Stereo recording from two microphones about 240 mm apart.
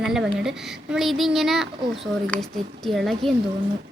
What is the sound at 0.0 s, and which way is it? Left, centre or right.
A woman's voice, centre.